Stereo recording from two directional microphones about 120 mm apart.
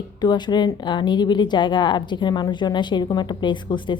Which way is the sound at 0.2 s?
35° left (ahead or behind).